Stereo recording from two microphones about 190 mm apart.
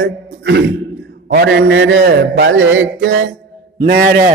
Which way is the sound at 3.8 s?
55° right (ahead or behind).